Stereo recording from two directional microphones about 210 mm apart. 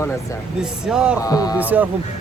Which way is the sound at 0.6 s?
5° right (ahead or behind).